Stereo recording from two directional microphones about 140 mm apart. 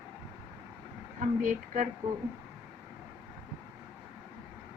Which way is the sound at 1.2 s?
65° right (ahead or behind).